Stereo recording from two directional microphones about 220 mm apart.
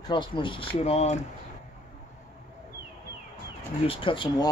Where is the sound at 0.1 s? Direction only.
20° left (ahead or behind).